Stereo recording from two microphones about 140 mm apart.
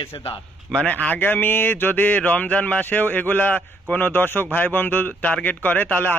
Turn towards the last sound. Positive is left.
turn(degrees=15)  # may be behind; listen again after turning